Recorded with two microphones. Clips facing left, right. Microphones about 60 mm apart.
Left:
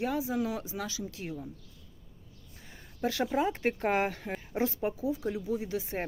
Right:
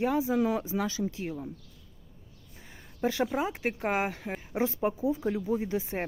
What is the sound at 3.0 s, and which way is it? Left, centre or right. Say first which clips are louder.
Speech: right 2 dB; right.